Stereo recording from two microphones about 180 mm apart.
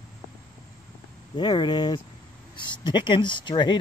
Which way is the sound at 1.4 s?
25° left (ahead or behind).